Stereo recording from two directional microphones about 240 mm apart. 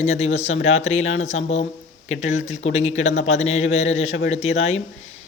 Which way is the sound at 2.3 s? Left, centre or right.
Left.